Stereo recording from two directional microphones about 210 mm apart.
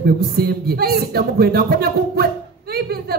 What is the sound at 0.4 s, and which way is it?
Speech, 45° right (ahead or behind).